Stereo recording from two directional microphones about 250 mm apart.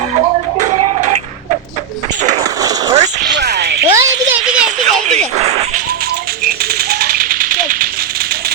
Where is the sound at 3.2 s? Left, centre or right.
Right.